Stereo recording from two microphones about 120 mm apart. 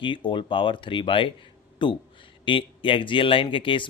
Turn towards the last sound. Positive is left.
turn(degrees=45)  # may be behind; listen again after turning